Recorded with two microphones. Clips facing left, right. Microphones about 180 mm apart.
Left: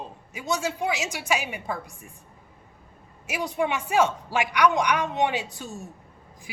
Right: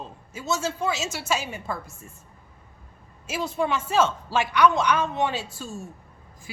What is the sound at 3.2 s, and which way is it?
A man's voice, 15° left (ahead or behind).